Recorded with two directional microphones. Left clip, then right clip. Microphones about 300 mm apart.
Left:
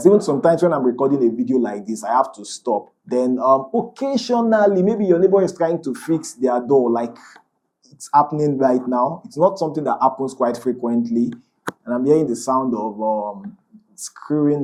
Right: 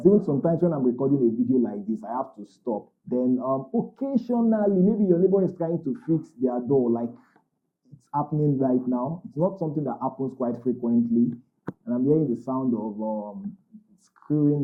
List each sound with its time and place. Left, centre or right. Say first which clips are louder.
0.0 s speech: left 7 dB; centre
3.6 s mantra: left 7 dB; left
3.9 s speech: left 8 dB; centre
6.7 s mantra: left 6 dB; left
6.9 s speech: left 7 dB; centre
12.5 s speech: left 9 dB; centre
12.8 s mantra: left 10 dB; left
14.3 s speech: left 5 dB; centre